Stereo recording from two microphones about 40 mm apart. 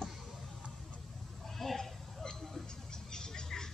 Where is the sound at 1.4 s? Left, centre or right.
Centre.